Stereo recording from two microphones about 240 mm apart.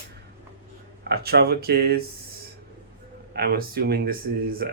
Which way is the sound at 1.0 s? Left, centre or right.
Right.